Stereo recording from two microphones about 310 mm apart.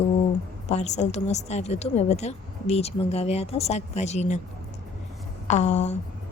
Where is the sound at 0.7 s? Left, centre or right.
Left.